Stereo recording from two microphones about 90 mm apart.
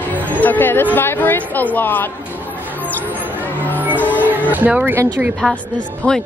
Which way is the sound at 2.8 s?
20° right (ahead or behind).